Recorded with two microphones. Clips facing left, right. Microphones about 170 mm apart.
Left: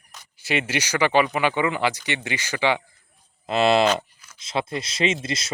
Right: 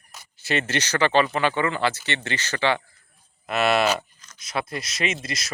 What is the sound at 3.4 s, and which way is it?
Speech, 25° left (ahead or behind).